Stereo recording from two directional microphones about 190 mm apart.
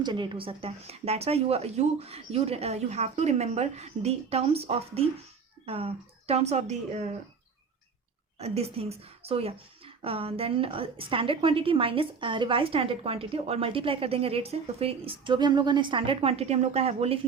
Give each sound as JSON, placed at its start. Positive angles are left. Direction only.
{"t": 0.0, "sound": "speech", "side_deg": -25}
{"t": 8.4, "sound": "speech", "side_deg": -35}